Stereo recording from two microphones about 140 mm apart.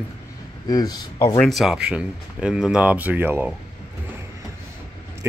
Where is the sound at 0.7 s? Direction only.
30° left (ahead or behind).